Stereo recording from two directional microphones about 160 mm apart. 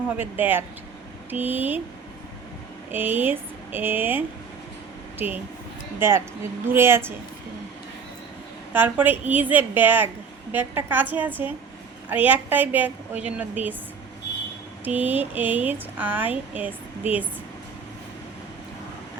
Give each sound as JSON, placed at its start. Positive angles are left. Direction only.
{"t": 0.2, "sound": "speech", "side_deg": -10}
{"t": 2.9, "sound": "speech", "side_deg": -10}
{"t": 8.7, "sound": "speech", "side_deg": -10}
{"t": 14.8, "sound": "speech", "side_deg": -10}